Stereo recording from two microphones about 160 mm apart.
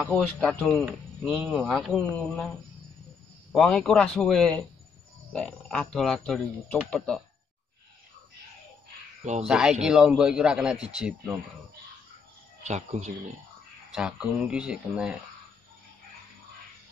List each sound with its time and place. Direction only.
0.0 s a man's voice: centre (ahead or behind)
3.5 s a man's voice: 5° left (ahead or behind)
9.2 s speech: 45° right (ahead or behind)
9.5 s a man's voice: 5° right (ahead or behind)
12.6 s speech: 45° right (ahead or behind)
13.9 s a man's voice: 5° right (ahead or behind)